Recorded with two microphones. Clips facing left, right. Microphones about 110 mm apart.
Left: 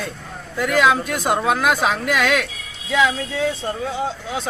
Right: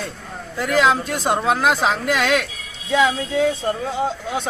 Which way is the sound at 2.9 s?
35° right (ahead or behind).